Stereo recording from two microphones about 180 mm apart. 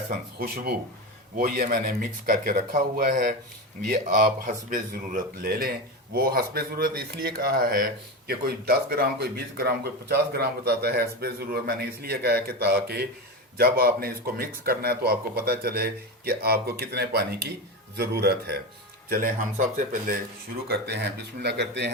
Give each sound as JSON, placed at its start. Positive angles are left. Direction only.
{"t": 0.3, "sound": "speech", "side_deg": -55}
{"t": 4.4, "sound": "speech", "side_deg": -50}
{"t": 20.7, "sound": "speech", "side_deg": -65}